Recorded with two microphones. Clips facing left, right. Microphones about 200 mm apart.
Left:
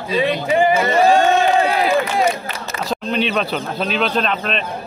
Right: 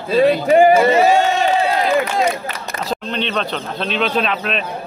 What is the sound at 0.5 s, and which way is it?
Speech, 45° right (ahead or behind).